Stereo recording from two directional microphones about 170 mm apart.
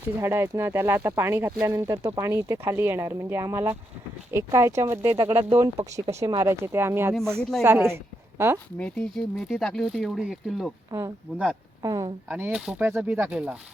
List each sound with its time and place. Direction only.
0.2 s speech: 15° right (ahead or behind)
7.1 s speech: 5° left (ahead or behind)
7.6 s speech: 15° right (ahead or behind)
8.8 s speech: 5° left (ahead or behind)
10.9 s speech: 15° right (ahead or behind)
12.3 s speech: 10° right (ahead or behind)